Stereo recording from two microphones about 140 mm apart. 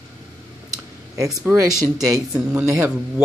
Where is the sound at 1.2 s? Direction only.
25° right (ahead or behind).